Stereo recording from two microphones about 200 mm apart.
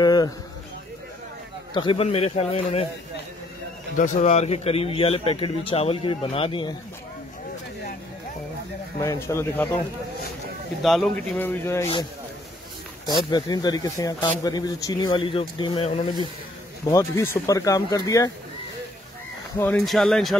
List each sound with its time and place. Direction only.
0.0 s a sound: 20° left (ahead or behind)
1.7 s speech: 25° left (ahead or behind)
3.9 s speech: 40° left (ahead or behind); by 6.8 s 25° left (ahead or behind)
9.0 s speech: 15° left (ahead or behind)
10.8 s speech: centre (ahead or behind)
13.0 s speech: 20° left (ahead or behind)
16.8 s speech: 15° left (ahead or behind)
19.6 s speech: 5° left (ahead or behind)